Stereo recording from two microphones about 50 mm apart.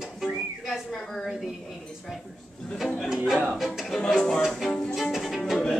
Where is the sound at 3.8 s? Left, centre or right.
Centre.